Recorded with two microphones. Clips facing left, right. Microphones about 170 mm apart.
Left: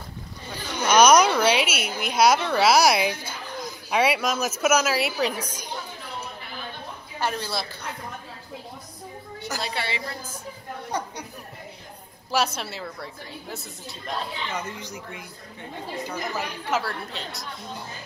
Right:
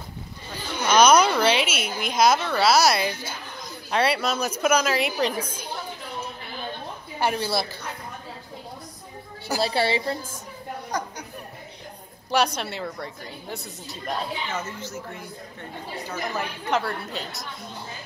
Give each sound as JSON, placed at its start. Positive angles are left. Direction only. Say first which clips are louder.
{"t": 0.8, "sound": "a woman's voice", "louder": "left 1 dB", "side_deg": 10}
{"t": 7.2, "sound": "speech", "louder": "right 4 dB", "side_deg": -10}
{"t": 9.6, "sound": "a woman's voice", "louder": "right 9 dB", "side_deg": -30}
{"t": 10.9, "sound": "speech", "louder": "left 1 dB", "side_deg": 30}
{"t": 12.3, "sound": "a woman's voice", "louder": "right 2 dB", "side_deg": 5}
{"t": 14.6, "sound": "a woman's voice", "louder": "right 1 dB", "side_deg": 15}
{"t": 16.3, "sound": "a woman's voice", "louder": "right 2 dB", "side_deg": 0}